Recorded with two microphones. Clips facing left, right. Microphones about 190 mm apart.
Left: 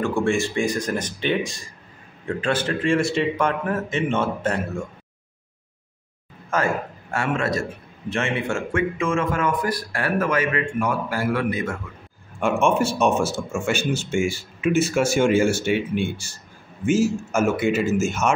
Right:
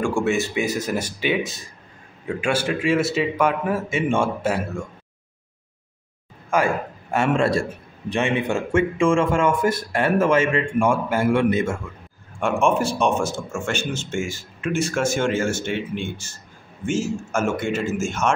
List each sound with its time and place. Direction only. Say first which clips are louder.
0.0 s a man's voice: even; 5° right (ahead or behind)
6.5 s a man's voice: right 2 dB; 15° right (ahead or behind)
7.3 s speech: right 4 dB; 30° right (ahead or behind)
8.1 s a man's voice: right 3 dB; 15° right (ahead or behind)
8.9 s speech: right 4 dB; 30° right (ahead or behind)
12.4 s a man's voice: even; centre (ahead or behind)